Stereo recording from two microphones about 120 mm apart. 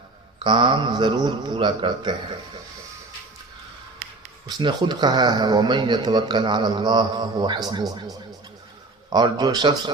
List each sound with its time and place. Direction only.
0.4 s speech: 40° right (ahead or behind)
4.4 s speech: 35° right (ahead or behind)